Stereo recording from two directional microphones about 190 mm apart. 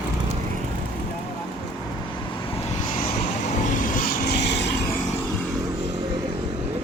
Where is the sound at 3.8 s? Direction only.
45° left (ahead or behind); by 4.7 s 65° left (ahead or behind).